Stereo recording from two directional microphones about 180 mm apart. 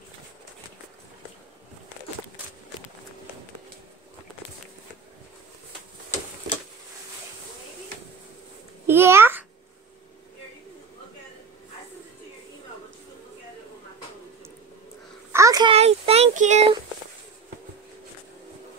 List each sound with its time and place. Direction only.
8.8 s babbling: 15° right (ahead or behind)
15.3 s a sound: 20° right (ahead or behind)
15.7 s child singing: 35° right (ahead or behind)